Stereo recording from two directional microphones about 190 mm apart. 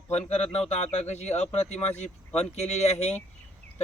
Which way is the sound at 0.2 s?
35° left (ahead or behind).